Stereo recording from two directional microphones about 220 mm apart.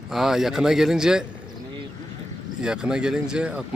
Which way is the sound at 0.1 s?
Centre (ahead or behind).